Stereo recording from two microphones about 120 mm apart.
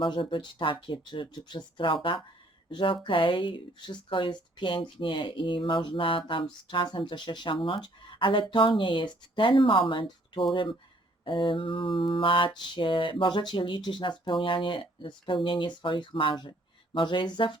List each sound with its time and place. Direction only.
0.0 s speech: 45° left (ahead or behind)